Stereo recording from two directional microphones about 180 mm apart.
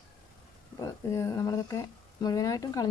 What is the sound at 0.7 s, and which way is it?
Speech, 20° left (ahead or behind).